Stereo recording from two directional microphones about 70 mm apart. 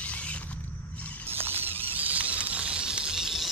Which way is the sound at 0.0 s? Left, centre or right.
Centre.